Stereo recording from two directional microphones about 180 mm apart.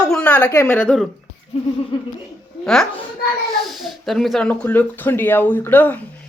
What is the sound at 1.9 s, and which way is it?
Speech, 30° left (ahead or behind).